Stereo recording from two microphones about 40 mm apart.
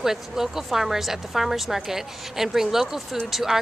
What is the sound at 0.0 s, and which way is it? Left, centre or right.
A woman's voice, centre.